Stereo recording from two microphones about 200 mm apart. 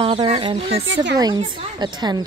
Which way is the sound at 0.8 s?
65° right (ahead or behind).